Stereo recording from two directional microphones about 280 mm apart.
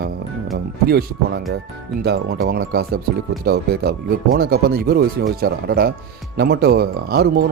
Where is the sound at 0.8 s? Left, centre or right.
Right.